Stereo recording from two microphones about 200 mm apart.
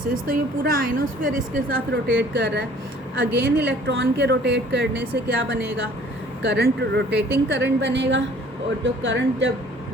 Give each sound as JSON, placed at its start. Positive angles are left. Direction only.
{"t": 0.0, "sound": "a woman's voice", "side_deg": -45}
{"t": 2.0, "sound": "a woman's voice", "side_deg": -55}